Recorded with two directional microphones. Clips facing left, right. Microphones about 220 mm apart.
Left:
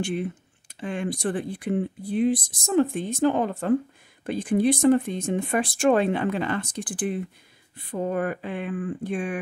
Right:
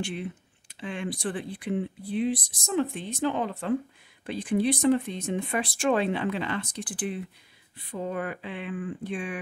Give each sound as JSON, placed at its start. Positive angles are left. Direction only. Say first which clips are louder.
{"t": 0.0, "sound": "speech", "louder": "left 5 dB", "side_deg": 45}